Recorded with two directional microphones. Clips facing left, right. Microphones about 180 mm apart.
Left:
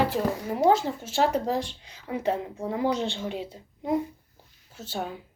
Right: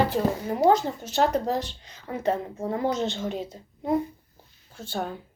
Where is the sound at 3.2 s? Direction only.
45° right (ahead or behind).